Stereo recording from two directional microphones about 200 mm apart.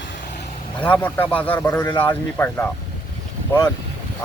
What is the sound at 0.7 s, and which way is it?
Speech, 10° left (ahead or behind).